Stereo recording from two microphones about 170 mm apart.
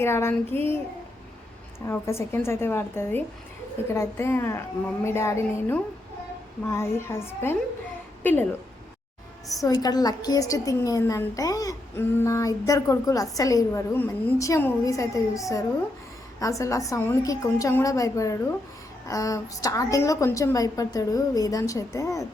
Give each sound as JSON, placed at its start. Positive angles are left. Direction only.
{"t": 0.0, "sound": "a woman's voice", "side_deg": 15}
{"t": 1.9, "sound": "a woman's voice", "side_deg": 15}
{"t": 9.6, "sound": "a woman's voice", "side_deg": 25}